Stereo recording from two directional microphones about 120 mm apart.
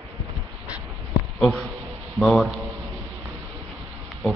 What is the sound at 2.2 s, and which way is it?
Speech, centre (ahead or behind).